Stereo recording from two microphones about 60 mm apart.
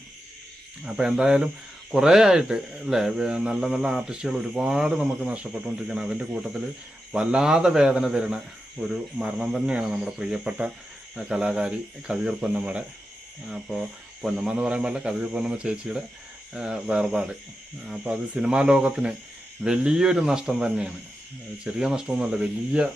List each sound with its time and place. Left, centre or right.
0.9 s speech: centre
13.5 s speech: centre